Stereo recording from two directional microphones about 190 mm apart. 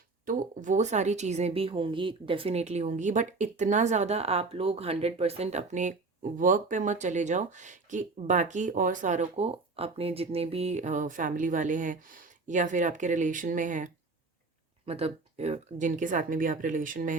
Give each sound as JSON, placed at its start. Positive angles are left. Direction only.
{"t": 0.3, "sound": "speech", "side_deg": -40}
{"t": 14.8, "sound": "speech", "side_deg": -30}